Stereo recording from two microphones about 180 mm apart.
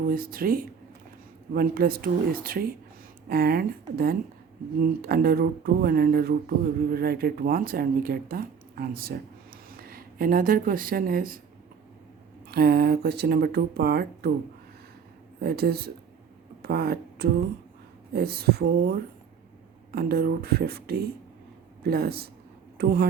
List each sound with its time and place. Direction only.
0.0 s speech: 55° right (ahead or behind)
12.5 s speech: 60° right (ahead or behind)
15.4 s speech: 60° right (ahead or behind)